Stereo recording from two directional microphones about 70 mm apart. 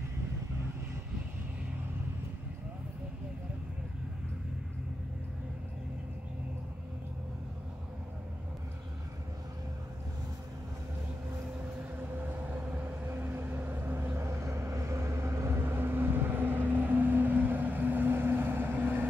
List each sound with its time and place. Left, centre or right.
12.1 s vehicle: right